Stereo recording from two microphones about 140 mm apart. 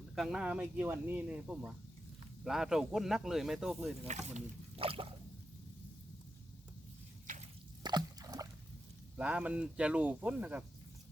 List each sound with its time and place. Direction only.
0.2 s speech: 5° right (ahead or behind)
4.0 s speech: 50° right (ahead or behind)
7.9 s a sound: 30° right (ahead or behind)
9.1 s speech: 10° right (ahead or behind)